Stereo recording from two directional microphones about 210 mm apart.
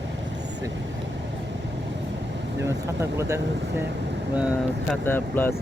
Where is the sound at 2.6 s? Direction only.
15° right (ahead or behind).